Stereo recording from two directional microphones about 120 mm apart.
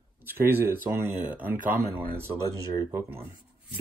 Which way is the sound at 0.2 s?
15° right (ahead or behind).